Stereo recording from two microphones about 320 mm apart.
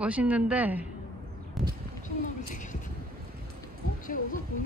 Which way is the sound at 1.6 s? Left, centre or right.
Centre.